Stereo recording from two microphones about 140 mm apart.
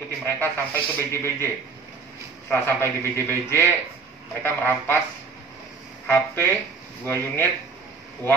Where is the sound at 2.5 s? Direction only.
15° left (ahead or behind).